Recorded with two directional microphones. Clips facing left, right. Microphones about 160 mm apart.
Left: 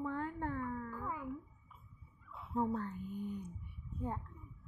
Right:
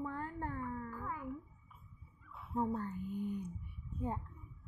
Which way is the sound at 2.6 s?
10° right (ahead or behind).